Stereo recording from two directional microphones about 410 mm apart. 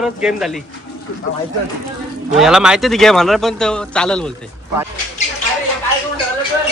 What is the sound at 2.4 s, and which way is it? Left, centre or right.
Speech, centre.